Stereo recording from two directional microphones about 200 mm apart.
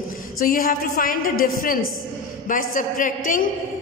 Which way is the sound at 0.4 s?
45° left (ahead or behind).